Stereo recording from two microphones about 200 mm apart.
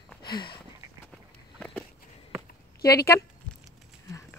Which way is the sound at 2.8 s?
50° left (ahead or behind).